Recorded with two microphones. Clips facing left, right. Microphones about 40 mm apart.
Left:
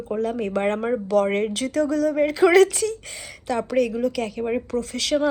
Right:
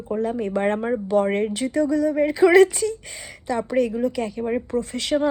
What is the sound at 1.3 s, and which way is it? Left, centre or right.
Speech, left.